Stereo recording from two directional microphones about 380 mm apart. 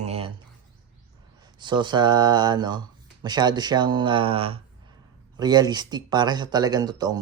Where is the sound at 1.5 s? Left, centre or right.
Centre.